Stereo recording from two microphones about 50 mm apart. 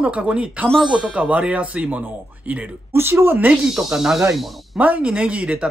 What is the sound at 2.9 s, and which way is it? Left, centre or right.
Speech, right.